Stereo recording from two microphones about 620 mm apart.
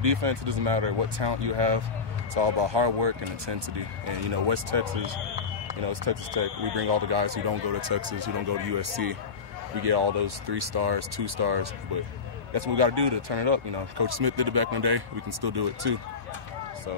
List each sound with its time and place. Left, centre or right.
0.0 s speech: right
5.9 s speech: right